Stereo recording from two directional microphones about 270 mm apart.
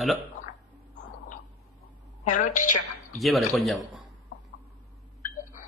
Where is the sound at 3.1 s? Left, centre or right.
Centre.